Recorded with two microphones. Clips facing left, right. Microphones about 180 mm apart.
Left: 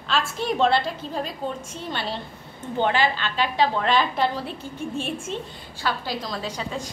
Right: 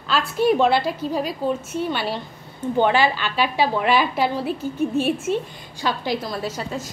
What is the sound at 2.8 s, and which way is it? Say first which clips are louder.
A woman's voice: right 3 dB; 10° right (ahead or behind).